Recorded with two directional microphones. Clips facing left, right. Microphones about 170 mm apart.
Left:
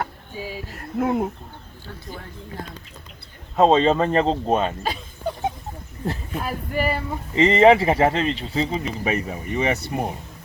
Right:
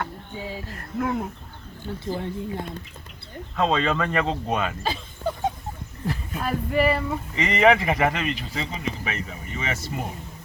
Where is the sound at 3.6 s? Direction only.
40° left (ahead or behind).